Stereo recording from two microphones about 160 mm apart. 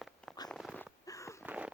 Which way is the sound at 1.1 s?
20° left (ahead or behind).